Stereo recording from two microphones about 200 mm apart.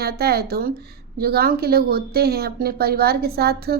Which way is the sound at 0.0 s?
50° right (ahead or behind).